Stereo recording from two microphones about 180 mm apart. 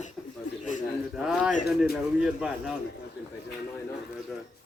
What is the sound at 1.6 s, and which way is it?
A woman's voice, centre (ahead or behind).